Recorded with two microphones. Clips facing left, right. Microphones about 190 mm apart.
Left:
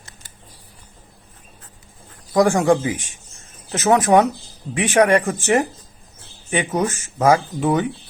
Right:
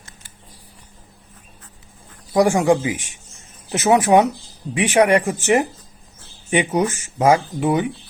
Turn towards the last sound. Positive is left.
turn(degrees=-15)  # may be behind; listen again after turning